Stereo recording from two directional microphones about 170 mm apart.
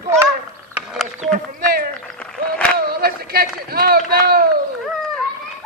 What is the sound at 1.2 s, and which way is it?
Speech, 50° right (ahead or behind).